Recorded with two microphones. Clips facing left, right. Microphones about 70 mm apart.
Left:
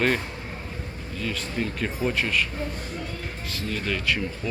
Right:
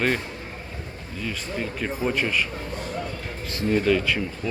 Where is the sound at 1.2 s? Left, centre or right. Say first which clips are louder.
Left 1 dB; centre.